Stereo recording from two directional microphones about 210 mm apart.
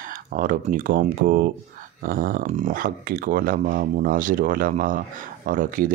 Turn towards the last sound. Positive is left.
turn(degrees=-40)  # may be behind; listen again after turning